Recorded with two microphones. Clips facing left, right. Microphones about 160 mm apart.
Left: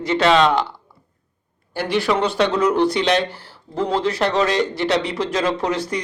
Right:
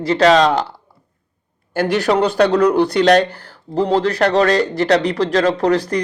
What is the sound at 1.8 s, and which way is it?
Speech, 40° right (ahead or behind).